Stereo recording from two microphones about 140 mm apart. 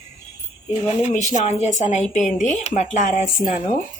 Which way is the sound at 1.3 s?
55° left (ahead or behind).